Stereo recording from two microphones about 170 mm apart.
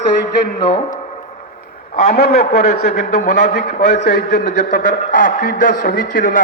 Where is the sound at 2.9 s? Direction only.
45° left (ahead or behind).